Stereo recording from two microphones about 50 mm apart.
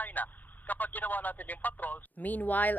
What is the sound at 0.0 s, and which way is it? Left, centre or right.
Speech, left.